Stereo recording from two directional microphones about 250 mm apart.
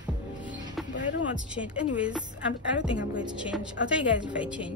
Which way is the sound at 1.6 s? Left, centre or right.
Centre.